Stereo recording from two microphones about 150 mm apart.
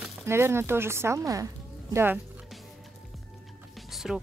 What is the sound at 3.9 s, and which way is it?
Music, centre (ahead or behind).